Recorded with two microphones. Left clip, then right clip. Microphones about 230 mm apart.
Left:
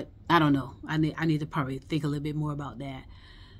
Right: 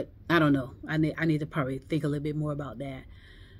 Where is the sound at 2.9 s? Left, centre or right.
Left.